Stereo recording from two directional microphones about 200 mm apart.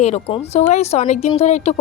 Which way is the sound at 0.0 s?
35° left (ahead or behind).